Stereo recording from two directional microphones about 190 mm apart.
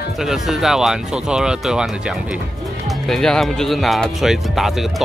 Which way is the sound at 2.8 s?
Centre (ahead or behind).